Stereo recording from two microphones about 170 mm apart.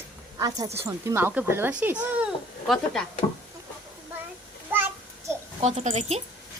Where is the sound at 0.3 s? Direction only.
20° right (ahead or behind).